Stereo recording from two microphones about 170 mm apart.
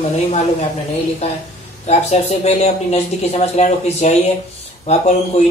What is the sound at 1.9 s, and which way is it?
Speech, 40° left (ahead or behind).